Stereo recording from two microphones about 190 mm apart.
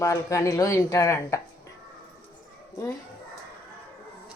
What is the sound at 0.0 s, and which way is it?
Speech, 15° left (ahead or behind).